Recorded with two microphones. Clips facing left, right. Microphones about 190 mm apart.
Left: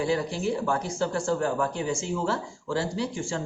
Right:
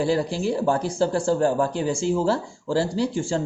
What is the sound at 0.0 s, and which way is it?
Speech, 30° right (ahead or behind).